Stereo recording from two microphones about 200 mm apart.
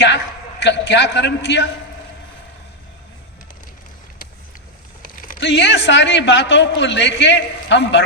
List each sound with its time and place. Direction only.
0.6 s a man's voice: 60° left (ahead or behind)
5.0 s a sound: 45° left (ahead or behind)
5.4 s a man's voice: 60° left (ahead or behind)